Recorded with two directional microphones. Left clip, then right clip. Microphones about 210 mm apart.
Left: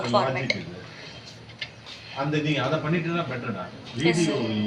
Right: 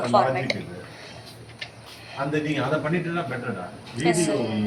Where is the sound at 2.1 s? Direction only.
15° right (ahead or behind).